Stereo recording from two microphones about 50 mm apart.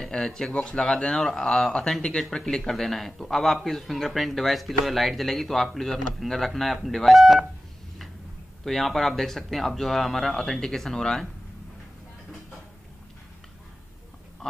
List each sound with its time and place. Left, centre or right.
0.1 s speech: centre
0.5 s speech: left
0.7 s speech: centre
8.6 s speech: centre